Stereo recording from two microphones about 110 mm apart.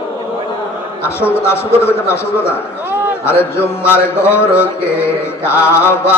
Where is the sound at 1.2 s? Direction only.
20° left (ahead or behind).